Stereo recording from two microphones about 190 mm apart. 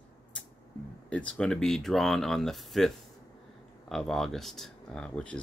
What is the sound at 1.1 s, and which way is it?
Speech, 5° left (ahead or behind).